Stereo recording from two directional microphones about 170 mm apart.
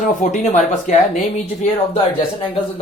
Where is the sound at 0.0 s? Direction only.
45° left (ahead or behind).